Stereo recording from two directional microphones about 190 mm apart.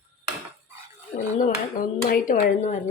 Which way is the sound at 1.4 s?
45° left (ahead or behind).